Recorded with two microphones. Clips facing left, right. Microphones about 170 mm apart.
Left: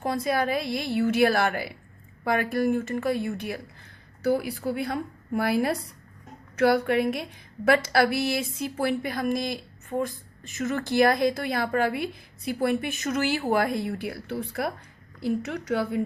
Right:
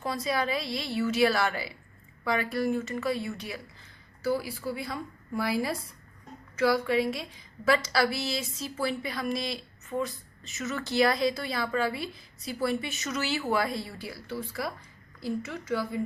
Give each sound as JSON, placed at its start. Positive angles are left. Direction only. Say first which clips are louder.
{"t": 0.0, "sound": "a woman's voice", "louder": "left 4 dB", "side_deg": 55}
{"t": 15.4, "sound": "a woman's voice", "louder": "left 4 dB", "side_deg": 70}